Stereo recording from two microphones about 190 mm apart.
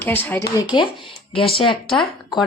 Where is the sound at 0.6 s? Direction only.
25° left (ahead or behind).